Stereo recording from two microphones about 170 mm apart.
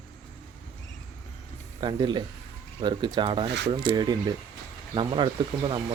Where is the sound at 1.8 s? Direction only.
25° right (ahead or behind).